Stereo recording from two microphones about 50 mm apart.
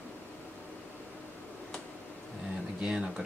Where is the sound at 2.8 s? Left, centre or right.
Centre.